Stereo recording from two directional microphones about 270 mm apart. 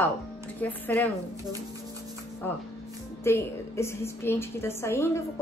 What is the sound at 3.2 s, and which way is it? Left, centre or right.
A woman's voice, centre.